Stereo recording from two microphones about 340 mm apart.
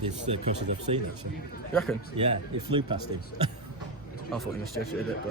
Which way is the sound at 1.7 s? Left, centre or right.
Centre.